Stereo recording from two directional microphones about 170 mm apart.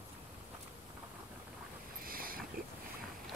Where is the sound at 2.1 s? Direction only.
60° right (ahead or behind).